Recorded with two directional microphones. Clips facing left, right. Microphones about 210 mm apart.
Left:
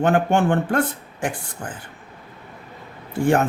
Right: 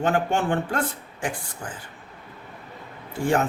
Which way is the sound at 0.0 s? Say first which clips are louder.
Left 5 dB; 55° left (ahead or behind).